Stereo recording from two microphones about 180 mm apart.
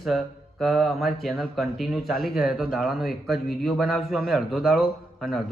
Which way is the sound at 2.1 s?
55° left (ahead or behind).